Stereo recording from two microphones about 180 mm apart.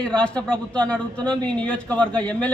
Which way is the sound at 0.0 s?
5° left (ahead or behind).